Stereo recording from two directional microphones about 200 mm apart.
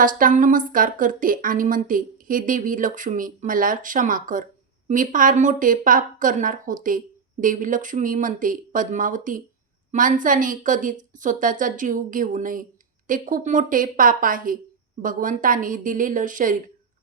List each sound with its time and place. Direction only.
0.0 s a woman's voice: 45° right (ahead or behind)